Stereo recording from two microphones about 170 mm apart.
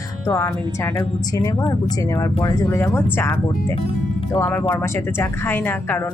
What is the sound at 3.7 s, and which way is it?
Speech, 35° left (ahead or behind).